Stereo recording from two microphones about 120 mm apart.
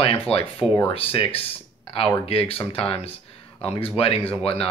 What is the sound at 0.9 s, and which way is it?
Speech, 50° left (ahead or behind).